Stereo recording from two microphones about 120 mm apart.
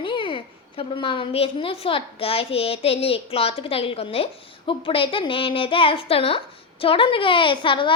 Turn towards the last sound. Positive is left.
turn(degrees=45)  # may be behind; listen again after turning